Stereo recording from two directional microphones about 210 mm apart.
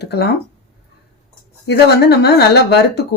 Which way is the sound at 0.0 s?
50° left (ahead or behind).